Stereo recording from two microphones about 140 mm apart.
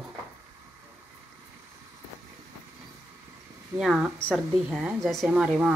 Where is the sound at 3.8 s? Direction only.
5° right (ahead or behind).